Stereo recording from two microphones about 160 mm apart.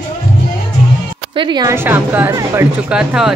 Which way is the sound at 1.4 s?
25° right (ahead or behind).